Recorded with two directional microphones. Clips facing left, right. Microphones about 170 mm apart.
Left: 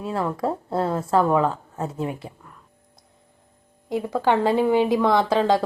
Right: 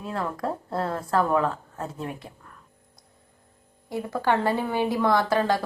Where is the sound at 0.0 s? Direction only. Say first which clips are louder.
Left 5 dB; 30° left (ahead or behind).